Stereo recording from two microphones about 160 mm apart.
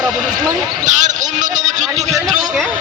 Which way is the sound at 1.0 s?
50° right (ahead or behind).